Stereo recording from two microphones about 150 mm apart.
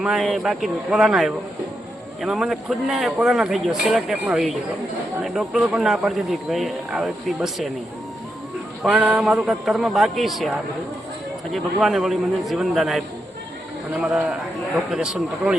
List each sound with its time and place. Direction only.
0.0 s speech: 5° right (ahead or behind)
8.8 s speech: 10° right (ahead or behind)
11.5 s speech: centre (ahead or behind)
14.0 s speech: 5° right (ahead or behind)